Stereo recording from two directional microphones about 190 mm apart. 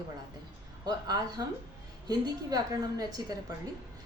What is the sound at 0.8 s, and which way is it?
A woman's voice, 20° right (ahead or behind).